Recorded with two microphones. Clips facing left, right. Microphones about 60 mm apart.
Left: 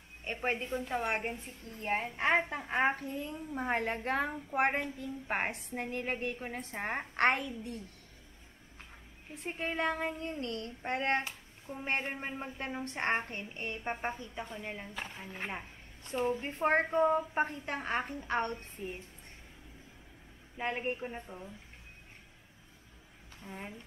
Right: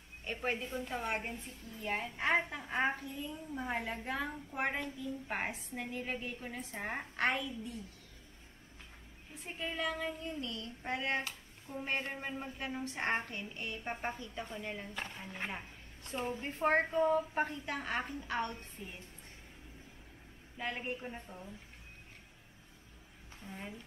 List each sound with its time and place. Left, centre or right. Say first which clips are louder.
0.2 s a woman's voice: left 3 dB; left
0.7 s speech: left 4 dB; centre
1.7 s a woman's voice: left 4 dB; left
9.4 s speech: left 4 dB; left
10.4 s a woman's voice: left 4 dB; left
11.2 s a sound: left 3 dB; left
12.0 s a woman's voice: left 2 dB; left
13.1 s a woman's voice: left 2 dB; left
13.9 s a woman's voice: left 2 dB; centre
16.3 s a woman's voice: right 2 dB; left
20.5 s a woman's voice: left 4 dB; left
21.0 s speech: left 4 dB; centre
23.4 s speech: left 2 dB; centre